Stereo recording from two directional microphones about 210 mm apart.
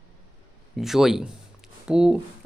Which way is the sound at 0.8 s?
Centre (ahead or behind).